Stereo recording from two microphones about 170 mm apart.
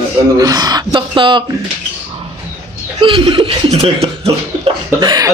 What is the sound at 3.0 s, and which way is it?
Speech, 30° right (ahead or behind).